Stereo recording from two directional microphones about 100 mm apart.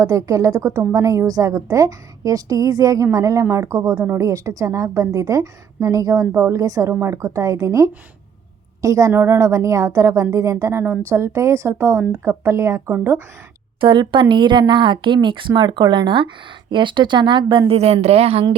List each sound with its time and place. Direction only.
0.0 s a woman's voice: 35° right (ahead or behind)
13.8 s speech: 55° right (ahead or behind)
17.7 s a woman's voice: 90° right